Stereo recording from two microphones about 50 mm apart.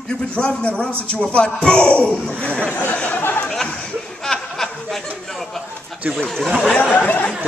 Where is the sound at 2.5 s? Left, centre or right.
Left.